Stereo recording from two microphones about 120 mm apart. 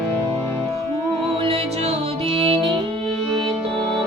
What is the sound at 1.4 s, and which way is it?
Music, 55° right (ahead or behind).